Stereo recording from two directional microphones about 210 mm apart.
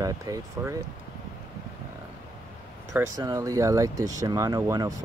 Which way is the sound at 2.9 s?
15° right (ahead or behind).